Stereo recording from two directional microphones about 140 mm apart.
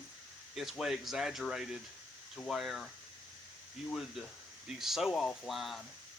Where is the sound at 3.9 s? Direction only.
Centre (ahead or behind).